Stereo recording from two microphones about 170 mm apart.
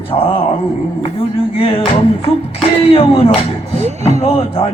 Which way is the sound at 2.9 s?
35° left (ahead or behind).